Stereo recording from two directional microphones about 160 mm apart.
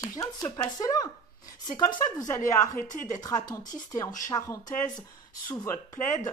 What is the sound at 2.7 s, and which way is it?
Speech, 50° left (ahead or behind).